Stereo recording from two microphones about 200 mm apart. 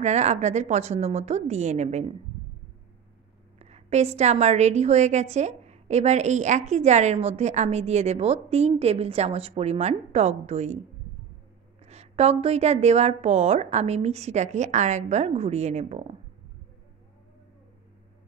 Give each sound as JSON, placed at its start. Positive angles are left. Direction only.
{"t": 0.0, "sound": "a woman's voice", "side_deg": -35}
{"t": 3.5, "sound": "a woman's voice", "side_deg": -35}
{"t": 11.8, "sound": "a woman's voice", "side_deg": -30}